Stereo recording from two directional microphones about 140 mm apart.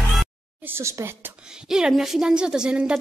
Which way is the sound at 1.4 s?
5° right (ahead or behind).